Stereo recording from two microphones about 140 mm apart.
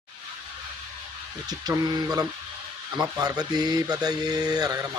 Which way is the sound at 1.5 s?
30° right (ahead or behind).